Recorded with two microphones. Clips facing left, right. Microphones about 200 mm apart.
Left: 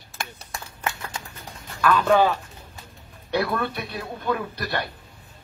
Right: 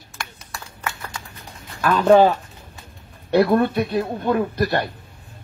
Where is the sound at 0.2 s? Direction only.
20° left (ahead or behind).